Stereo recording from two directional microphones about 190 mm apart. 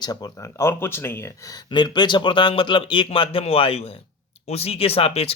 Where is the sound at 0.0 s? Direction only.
20° left (ahead or behind).